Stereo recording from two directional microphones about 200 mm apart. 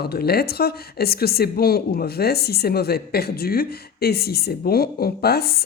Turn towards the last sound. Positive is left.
turn(degrees=50)  # may be behind; listen again after turning